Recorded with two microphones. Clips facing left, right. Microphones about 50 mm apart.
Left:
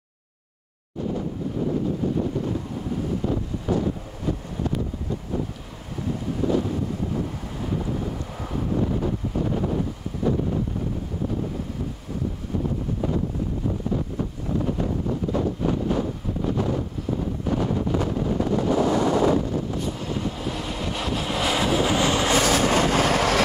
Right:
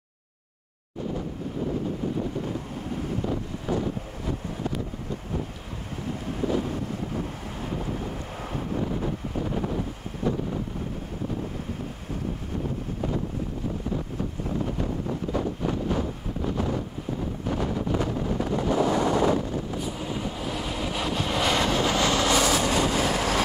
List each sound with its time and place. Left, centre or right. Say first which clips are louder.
3.3 s wind noise: left 3 dB; centre
6.7 s wind noise: left 4 dB; right
7.7 s boat: left 4 dB; right
8.0 s wind noise: left 3 dB; right
8.8 s wind noise: left 4 dB; centre
14.8 s wind noise: left 3 dB; centre
17.5 s wind noise: left 3 dB; centre
22.3 s vehicle: left 3 dB; left